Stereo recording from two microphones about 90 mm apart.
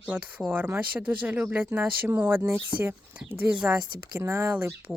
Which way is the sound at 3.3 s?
15° right (ahead or behind).